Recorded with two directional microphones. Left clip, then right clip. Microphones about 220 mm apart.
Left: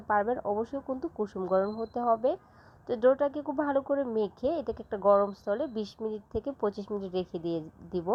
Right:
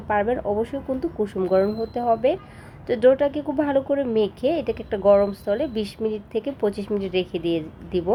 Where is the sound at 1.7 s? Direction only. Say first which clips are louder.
Right 6 dB; 20° left (ahead or behind).